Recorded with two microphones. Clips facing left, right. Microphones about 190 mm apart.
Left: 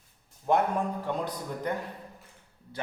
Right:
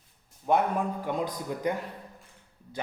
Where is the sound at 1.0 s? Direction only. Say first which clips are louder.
Right 2 dB; 10° right (ahead or behind).